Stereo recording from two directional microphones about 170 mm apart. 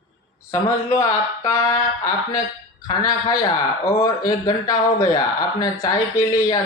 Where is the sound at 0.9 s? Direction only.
20° left (ahead or behind).